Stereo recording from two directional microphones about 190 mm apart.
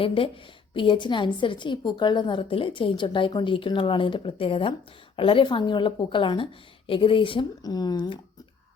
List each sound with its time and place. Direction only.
0.0 s a woman's voice: 30° left (ahead or behind)